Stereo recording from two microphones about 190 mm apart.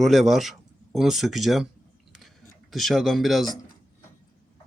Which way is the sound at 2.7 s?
Centre (ahead or behind).